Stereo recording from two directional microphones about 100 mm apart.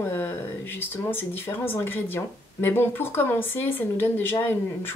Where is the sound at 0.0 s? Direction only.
20° left (ahead or behind).